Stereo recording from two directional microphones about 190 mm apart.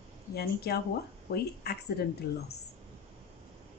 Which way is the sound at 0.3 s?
55° left (ahead or behind).